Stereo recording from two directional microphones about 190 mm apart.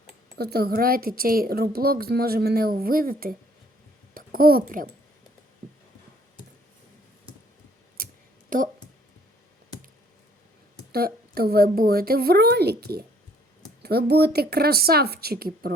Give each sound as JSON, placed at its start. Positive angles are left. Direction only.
{"t": 0.3, "sound": "a woman's voice", "side_deg": -55}
{"t": 8.0, "sound": "a sound", "side_deg": -50}
{"t": 8.4, "sound": "speech", "side_deg": -45}
{"t": 10.9, "sound": "a woman's voice", "side_deg": -55}